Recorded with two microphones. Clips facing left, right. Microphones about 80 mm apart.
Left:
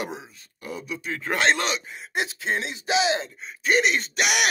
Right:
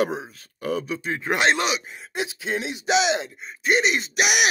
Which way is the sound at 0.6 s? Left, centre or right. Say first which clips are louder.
Right 9 dB; right.